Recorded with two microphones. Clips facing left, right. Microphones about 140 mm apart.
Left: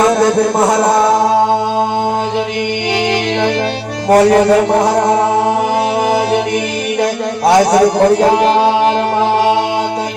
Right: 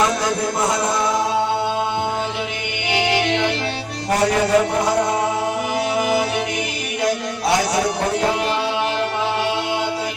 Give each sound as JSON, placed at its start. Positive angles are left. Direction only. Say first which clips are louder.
{"t": 0.0, "sound": "music", "louder": "left 9 dB", "side_deg": 50}
{"t": 4.1, "sound": "music", "louder": "left 9 dB", "side_deg": 50}
{"t": 7.0, "sound": "a sound", "louder": "left 6 dB", "side_deg": 50}
{"t": 8.4, "sound": "music", "louder": "left 10 dB", "side_deg": 45}